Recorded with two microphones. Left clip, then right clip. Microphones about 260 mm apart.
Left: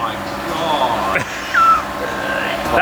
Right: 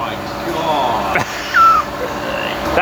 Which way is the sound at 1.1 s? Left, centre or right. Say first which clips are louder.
Right 2 dB; centre.